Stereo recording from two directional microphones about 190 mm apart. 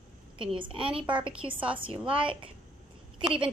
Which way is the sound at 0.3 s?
25° right (ahead or behind).